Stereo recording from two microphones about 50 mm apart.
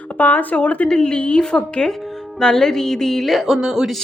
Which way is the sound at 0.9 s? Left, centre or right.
Centre.